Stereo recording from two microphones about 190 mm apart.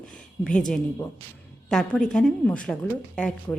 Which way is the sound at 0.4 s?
5° left (ahead or behind).